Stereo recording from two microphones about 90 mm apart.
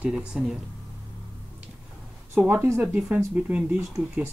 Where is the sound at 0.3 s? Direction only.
5° right (ahead or behind).